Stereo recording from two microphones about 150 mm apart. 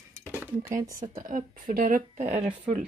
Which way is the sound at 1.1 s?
65° right (ahead or behind).